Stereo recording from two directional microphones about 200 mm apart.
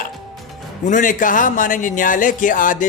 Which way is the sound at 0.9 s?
40° left (ahead or behind).